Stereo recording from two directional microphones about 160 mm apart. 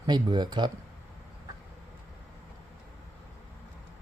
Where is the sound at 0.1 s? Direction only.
25° right (ahead or behind).